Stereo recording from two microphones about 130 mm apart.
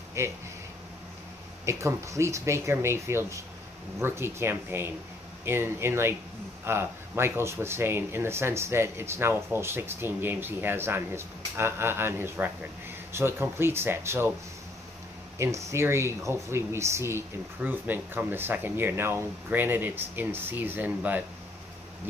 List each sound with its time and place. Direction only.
0.2 s speech: 20° right (ahead or behind)
1.7 s speech: 20° right (ahead or behind)
15.3 s speech: 20° right (ahead or behind)